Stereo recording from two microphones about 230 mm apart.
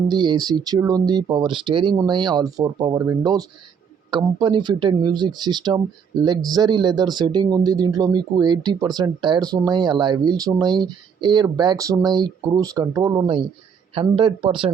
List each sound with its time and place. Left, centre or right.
0.1 s speech: centre